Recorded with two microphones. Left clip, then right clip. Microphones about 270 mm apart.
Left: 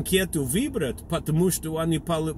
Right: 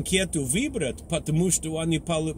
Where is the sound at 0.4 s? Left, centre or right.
Right.